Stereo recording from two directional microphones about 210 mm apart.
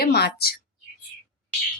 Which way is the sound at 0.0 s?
50° left (ahead or behind).